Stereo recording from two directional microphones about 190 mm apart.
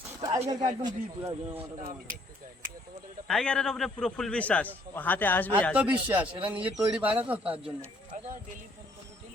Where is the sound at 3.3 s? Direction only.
5° left (ahead or behind).